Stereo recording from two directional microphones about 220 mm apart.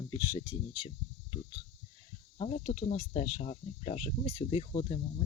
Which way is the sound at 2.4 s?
30° left (ahead or behind).